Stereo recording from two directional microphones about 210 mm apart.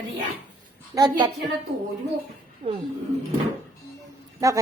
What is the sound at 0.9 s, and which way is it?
Speech, 20° right (ahead or behind).